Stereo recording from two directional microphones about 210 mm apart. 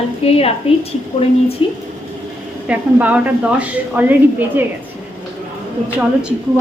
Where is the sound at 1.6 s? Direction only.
25° left (ahead or behind).